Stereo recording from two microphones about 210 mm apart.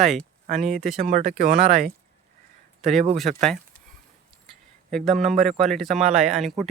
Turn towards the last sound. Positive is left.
turn(degrees=0)  # may be behind; listen again after turning